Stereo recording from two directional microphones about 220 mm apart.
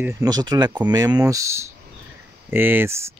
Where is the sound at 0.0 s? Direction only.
15° right (ahead or behind).